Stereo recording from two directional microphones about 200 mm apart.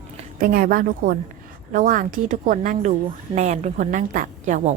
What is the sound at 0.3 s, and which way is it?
A woman's voice, 45° right (ahead or behind).